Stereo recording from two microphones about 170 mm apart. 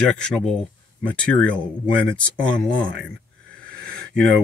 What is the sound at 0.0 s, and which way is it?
Speech, 5° left (ahead or behind).